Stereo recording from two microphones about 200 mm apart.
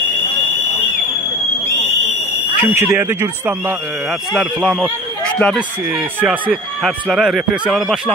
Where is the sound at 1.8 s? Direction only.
35° left (ahead or behind).